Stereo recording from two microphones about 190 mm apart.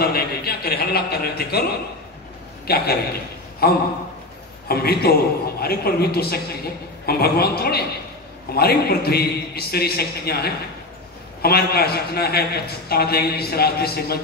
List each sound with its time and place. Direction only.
0.0 s a man's voice: 55° left (ahead or behind)